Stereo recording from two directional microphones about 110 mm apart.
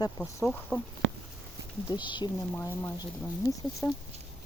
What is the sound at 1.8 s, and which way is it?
Speech, 45° left (ahead or behind).